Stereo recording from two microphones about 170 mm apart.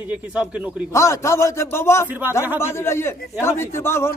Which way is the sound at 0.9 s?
15° left (ahead or behind).